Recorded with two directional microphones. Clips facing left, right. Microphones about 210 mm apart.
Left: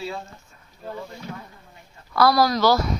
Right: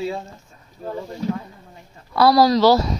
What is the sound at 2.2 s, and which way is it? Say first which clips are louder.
Speech: right 4 dB; 30° right (ahead or behind).